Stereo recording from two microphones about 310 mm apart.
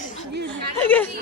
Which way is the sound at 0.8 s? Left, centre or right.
Centre.